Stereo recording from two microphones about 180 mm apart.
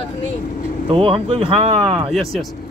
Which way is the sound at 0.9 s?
30° right (ahead or behind).